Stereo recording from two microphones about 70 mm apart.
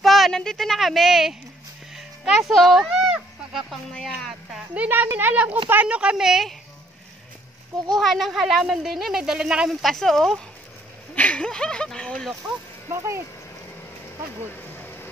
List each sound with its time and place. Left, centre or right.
0.0 s a sound: centre
0.4 s speech: centre
4.7 s speech: right; by 6.5 s centre
8.0 s speech: centre
9.7 s speech: centre
11.1 s speech: centre
12.9 s speech: right
14.5 s a sound: left